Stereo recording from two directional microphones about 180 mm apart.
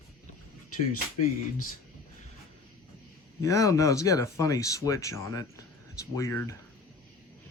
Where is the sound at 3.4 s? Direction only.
15° left (ahead or behind).